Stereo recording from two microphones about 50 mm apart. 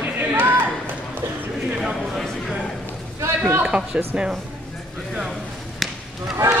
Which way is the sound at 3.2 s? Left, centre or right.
Right.